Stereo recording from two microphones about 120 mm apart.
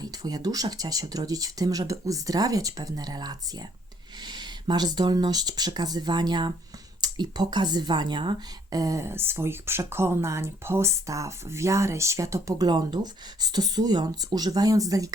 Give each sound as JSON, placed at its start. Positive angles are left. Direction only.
{"t": 0.0, "sound": "speech", "side_deg": -30}